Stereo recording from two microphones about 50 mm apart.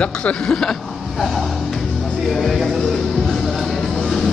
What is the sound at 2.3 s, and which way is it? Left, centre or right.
Speech, centre.